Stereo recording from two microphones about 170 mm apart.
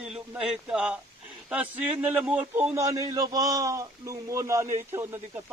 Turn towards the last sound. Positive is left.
turn(degrees=-15)  # may be behind; listen again after turning